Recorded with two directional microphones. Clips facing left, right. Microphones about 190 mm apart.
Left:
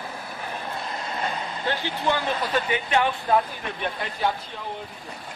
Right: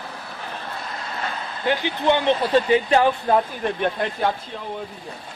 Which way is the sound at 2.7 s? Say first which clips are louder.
Right 4 dB; 35° right (ahead or behind).